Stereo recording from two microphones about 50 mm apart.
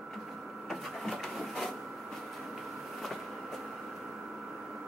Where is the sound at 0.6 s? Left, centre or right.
Centre.